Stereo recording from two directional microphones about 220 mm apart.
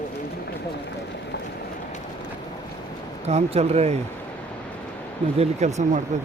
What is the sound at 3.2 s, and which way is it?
Speech, 30° right (ahead or behind).